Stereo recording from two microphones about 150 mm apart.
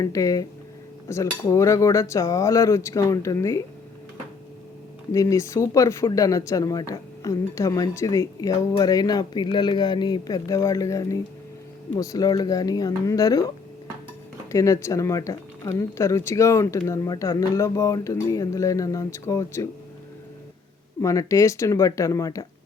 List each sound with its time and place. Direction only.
0.0 s speech: 20° left (ahead or behind)
5.1 s speech: 20° left (ahead or behind)
14.5 s speech: 20° left (ahead or behind)
21.0 s speech: 20° left (ahead or behind)